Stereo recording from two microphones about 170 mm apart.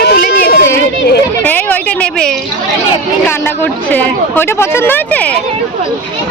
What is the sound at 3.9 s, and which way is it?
Speech, 10° left (ahead or behind).